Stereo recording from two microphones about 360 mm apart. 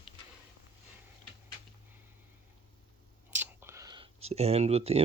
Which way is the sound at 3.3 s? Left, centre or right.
Centre.